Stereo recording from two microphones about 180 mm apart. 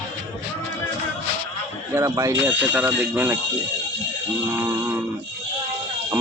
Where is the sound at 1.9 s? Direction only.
15° right (ahead or behind).